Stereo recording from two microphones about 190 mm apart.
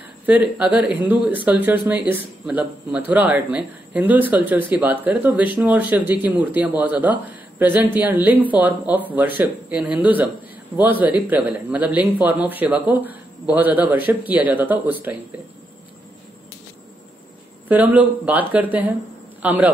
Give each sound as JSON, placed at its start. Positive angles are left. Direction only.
{"t": 0.3, "sound": "a man's voice", "side_deg": -5}
{"t": 17.6, "sound": "a man's voice", "side_deg": -10}